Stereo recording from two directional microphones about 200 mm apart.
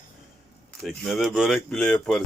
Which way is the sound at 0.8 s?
Centre (ahead or behind).